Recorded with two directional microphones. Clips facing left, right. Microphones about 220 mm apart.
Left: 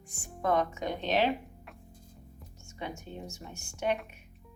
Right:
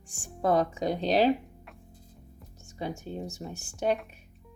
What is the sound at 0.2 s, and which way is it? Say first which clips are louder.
Speech: right 3 dB; 35° right (ahead or behind).